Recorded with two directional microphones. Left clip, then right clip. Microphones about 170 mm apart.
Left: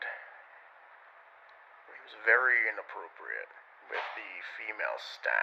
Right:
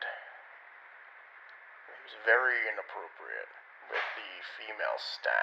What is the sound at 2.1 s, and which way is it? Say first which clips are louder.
Speech: left 1 dB; 20° left (ahead or behind).